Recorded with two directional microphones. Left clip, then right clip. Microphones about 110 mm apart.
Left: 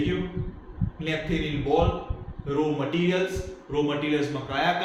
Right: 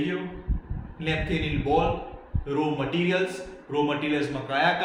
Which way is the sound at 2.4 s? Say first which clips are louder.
Left 1 dB; 55° right (ahead or behind).